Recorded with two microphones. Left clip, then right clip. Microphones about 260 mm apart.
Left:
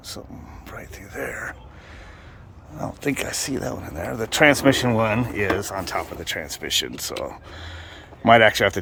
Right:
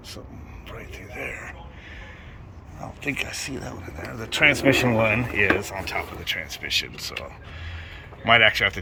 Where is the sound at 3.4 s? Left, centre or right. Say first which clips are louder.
Left 6 dB; left.